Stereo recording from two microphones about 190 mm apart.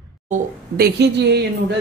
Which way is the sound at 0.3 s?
55° right (ahead or behind).